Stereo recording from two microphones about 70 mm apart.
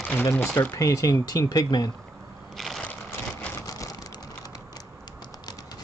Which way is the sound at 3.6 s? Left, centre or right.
Left.